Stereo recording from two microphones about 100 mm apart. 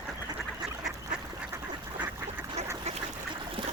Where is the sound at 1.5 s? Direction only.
20° right (ahead or behind).